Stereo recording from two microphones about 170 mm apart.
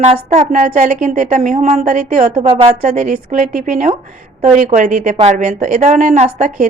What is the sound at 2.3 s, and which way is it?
A woman's voice, 30° right (ahead or behind).